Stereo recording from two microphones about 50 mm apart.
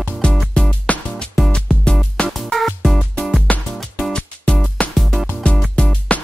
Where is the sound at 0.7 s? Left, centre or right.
Left.